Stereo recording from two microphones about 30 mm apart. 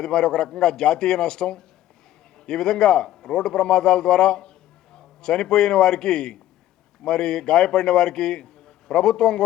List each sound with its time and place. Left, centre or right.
0.0 s speech: left
3.1 s a sound: centre
3.3 s a man's voice: left